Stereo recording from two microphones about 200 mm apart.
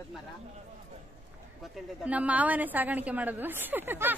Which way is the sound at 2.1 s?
5° right (ahead or behind).